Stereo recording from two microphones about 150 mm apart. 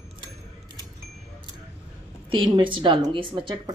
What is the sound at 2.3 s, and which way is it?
A woman's voice, 30° right (ahead or behind).